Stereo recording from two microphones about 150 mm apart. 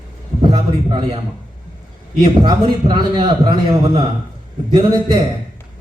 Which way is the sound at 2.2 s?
30° right (ahead or behind).